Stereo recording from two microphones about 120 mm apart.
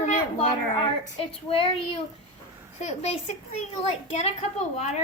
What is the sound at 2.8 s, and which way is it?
Speech, 65° left (ahead or behind).